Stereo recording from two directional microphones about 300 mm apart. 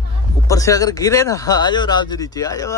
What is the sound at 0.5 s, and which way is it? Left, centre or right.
Speech, centre.